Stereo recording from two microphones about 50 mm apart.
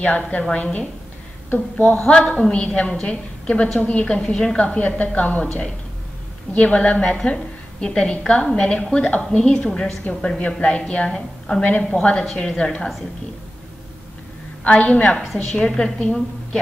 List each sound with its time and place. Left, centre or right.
0.0 s a woman's voice: left
2.0 s a woman's voice: centre
5.4 s a woman's voice: centre
14.6 s a woman's voice: left